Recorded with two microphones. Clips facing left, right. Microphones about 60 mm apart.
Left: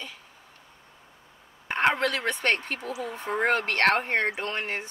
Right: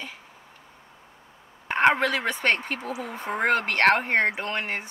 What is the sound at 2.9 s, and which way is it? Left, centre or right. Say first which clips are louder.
Speech: left 3 dB; centre.